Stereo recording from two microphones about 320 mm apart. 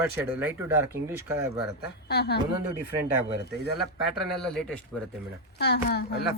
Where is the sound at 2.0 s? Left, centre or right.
Left.